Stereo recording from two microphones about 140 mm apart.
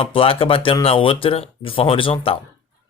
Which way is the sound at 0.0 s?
40° left (ahead or behind).